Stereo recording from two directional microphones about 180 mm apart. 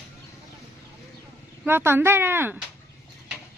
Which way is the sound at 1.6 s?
10° right (ahead or behind).